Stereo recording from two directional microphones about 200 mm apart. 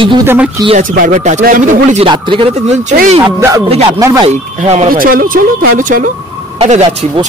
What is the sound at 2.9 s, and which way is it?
Speech, 35° right (ahead or behind).